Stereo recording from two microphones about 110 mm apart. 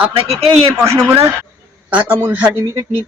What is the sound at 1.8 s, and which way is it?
Speech, 10° right (ahead or behind).